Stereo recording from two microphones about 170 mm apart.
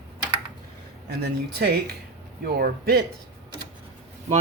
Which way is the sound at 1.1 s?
75° right (ahead or behind).